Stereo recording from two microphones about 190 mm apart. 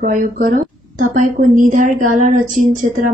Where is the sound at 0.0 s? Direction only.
45° right (ahead or behind).